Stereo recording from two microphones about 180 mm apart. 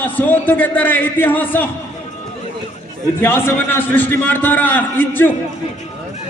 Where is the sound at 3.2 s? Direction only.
10° left (ahead or behind).